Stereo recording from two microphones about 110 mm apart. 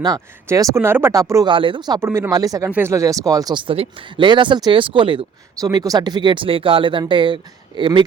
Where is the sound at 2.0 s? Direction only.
20° right (ahead or behind).